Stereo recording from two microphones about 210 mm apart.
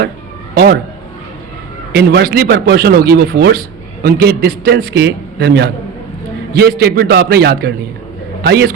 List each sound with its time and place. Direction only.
0.5 s speech: 50° right (ahead or behind)
1.9 s a man's voice: 55° right (ahead or behind)